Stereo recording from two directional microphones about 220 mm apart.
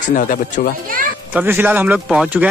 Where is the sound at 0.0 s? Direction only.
35° left (ahead or behind).